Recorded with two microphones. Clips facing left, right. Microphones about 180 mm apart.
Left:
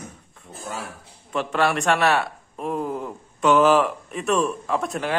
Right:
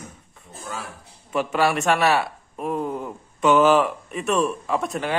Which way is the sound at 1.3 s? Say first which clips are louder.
Right 1 dB; 5° right (ahead or behind).